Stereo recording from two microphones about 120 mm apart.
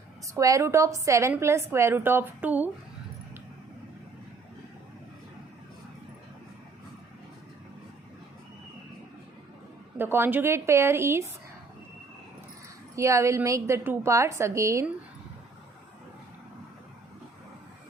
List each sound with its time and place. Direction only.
0.3 s a woman's voice: 25° right (ahead or behind)
10.0 s a woman's voice: 15° right (ahead or behind)
13.0 s a woman's voice: 25° right (ahead or behind)